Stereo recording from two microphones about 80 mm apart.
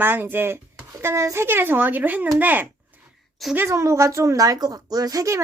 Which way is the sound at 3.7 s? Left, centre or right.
Right.